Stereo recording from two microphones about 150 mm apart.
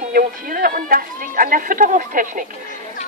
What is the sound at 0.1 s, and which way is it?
Speech, 70° right (ahead or behind).